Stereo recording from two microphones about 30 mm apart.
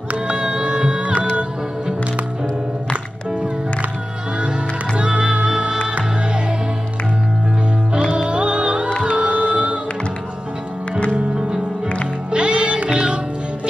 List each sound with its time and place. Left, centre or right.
0.3 s music: right
4.4 s music: right
8.3 s music: right
12.3 s music: right